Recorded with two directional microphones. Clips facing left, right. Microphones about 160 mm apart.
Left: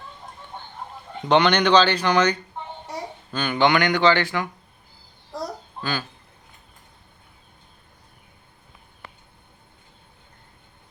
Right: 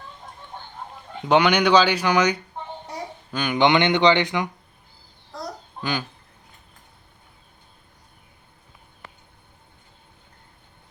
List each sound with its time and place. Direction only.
1.3 s speech: 10° right (ahead or behind)
5.8 s speech: 15° right (ahead or behind)